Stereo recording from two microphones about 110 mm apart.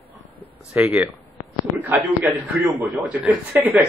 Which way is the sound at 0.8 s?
15° right (ahead or behind).